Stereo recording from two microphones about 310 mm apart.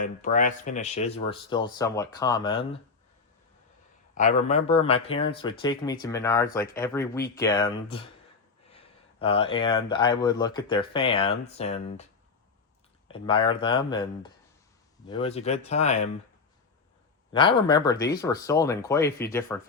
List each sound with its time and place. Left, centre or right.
0.0 s speech: left
4.1 s speech: left
13.1 s speech: centre
17.3 s speech: centre